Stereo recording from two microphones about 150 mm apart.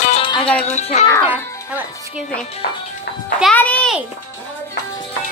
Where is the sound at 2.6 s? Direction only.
90° left.